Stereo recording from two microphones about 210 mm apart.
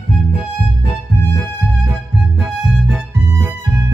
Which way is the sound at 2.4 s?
5° right (ahead or behind).